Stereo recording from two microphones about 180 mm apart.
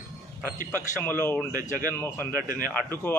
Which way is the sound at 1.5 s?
50° left (ahead or behind).